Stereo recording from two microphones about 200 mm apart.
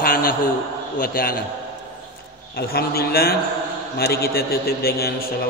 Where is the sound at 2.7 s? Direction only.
50° left (ahead or behind).